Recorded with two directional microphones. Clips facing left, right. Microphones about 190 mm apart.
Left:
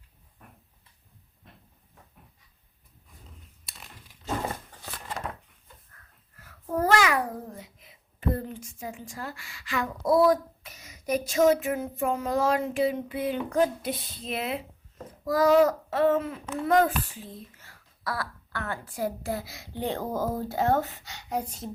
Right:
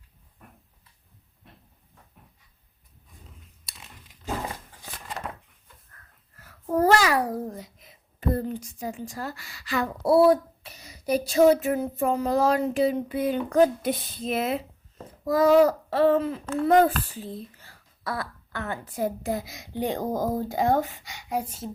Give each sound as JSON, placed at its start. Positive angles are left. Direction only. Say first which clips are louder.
{"t": 5.2, "sound": "a sound", "louder": "even", "side_deg": 0}
{"t": 6.7, "sound": "a child's voice", "louder": "right 3 dB", "side_deg": -35}
{"t": 15.2, "sound": "a child's voice", "louder": "right 2 dB", "side_deg": -25}